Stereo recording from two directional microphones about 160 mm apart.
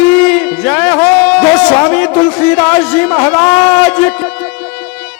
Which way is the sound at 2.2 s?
5° left (ahead or behind).